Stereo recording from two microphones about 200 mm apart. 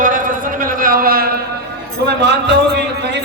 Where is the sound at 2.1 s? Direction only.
60° right (ahead or behind).